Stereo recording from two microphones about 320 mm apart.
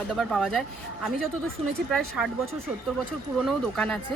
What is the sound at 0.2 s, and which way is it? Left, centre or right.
Speech, centre.